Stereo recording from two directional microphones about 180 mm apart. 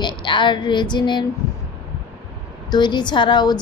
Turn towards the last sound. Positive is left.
turn(degrees=25)  # may be behind; listen again after turning